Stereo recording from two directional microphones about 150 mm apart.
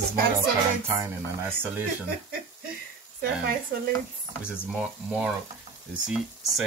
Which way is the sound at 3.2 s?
85° right.